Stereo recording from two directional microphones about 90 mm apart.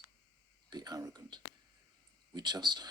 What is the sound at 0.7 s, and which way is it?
Speech, 50° right (ahead or behind).